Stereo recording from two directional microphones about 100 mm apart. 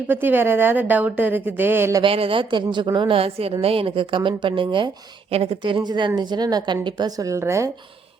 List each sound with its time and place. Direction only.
0.1 s a woman's voice: 20° right (ahead or behind)
2.0 s speech: 70° right (ahead or behind); by 3.2 s 50° right (ahead or behind)
3.2 s a woman's voice: 75° right (ahead or behind); by 4.9 s 55° right (ahead or behind)
5.3 s a woman's voice: 80° right; by 7.1 s 50° right (ahead or behind)
7.2 s a woman's voice: 30° right (ahead or behind)